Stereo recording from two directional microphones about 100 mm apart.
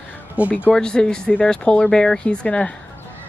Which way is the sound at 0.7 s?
10° left (ahead or behind).